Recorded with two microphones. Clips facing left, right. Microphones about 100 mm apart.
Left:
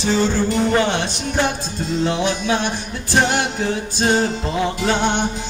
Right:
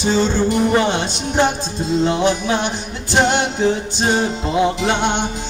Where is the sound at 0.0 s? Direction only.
25° right (ahead or behind).